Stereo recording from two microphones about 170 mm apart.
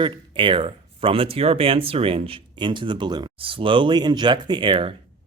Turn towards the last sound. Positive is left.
turn(degrees=-30)  # may be behind; listen again after turning